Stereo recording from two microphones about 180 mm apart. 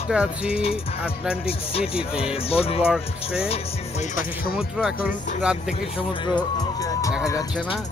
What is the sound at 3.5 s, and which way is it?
Music, 40° left (ahead or behind).